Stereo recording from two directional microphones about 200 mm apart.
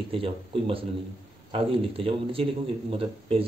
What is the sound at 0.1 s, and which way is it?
Speech, 25° right (ahead or behind).